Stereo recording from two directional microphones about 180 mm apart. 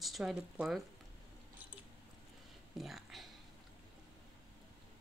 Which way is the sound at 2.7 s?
Centre (ahead or behind).